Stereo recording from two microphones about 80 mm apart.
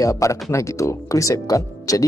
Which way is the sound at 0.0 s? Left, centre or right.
Left.